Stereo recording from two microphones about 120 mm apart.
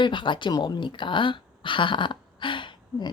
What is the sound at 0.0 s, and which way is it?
Speech, 40° left (ahead or behind).